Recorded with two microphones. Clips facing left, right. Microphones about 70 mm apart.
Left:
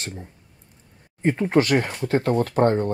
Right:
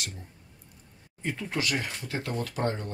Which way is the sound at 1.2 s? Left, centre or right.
Left.